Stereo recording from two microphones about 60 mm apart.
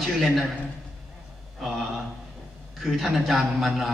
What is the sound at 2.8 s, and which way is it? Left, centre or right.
A man's voice, centre.